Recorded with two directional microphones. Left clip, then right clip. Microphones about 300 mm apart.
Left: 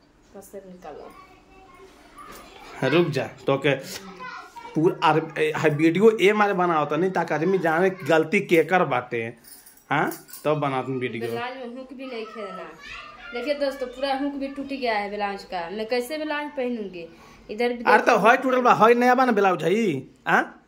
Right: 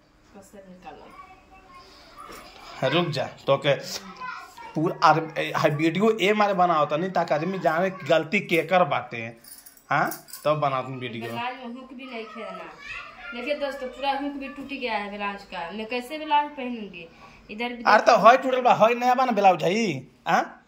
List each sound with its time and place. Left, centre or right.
2.6 s speech: centre
14.7 s speech: centre